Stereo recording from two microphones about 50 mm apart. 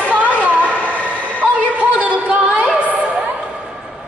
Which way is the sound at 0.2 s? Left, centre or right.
Left.